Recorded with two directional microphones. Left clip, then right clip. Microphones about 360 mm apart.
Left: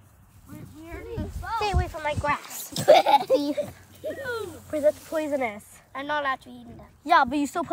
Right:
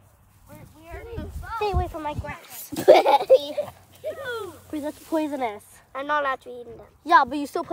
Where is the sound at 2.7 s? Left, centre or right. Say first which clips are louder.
Right 2 dB; right.